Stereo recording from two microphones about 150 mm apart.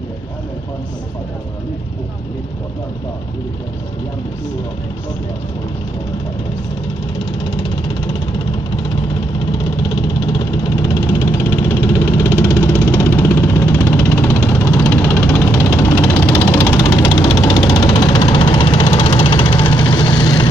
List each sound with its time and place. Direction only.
9.8 s vehicle: 30° left (ahead or behind)
13.2 s music: 15° left (ahead or behind); by 18.9 s 30° left (ahead or behind)
19.0 s vehicle: 35° left (ahead or behind)